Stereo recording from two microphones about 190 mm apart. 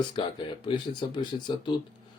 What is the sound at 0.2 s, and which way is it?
Speech, 25° left (ahead or behind).